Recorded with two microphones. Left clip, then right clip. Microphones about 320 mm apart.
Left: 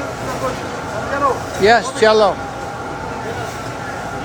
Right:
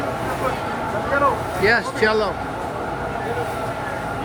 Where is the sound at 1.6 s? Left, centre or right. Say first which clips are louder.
Left 6 dB; centre.